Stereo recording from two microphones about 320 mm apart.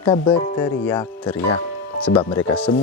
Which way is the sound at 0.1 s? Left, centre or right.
Centre.